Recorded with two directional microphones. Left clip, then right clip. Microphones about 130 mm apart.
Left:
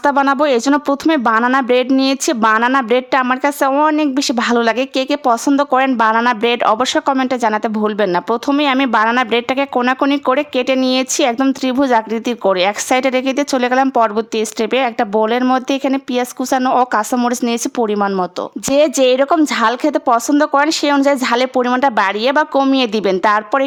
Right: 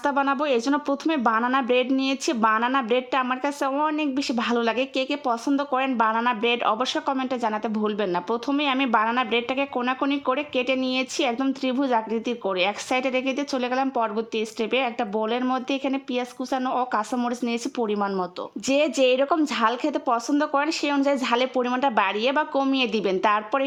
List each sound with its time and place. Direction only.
0.0 s a woman's voice: 35° left (ahead or behind)